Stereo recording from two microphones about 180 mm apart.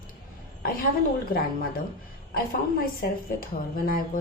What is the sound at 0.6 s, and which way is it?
A woman's voice, 55° left (ahead or behind).